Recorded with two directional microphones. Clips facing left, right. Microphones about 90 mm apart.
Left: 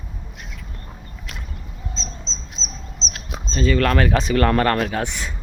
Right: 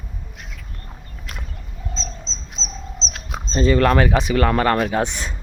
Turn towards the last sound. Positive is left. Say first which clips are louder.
# right 3 dB
turn(degrees=-25)  # may be behind; listen again after turning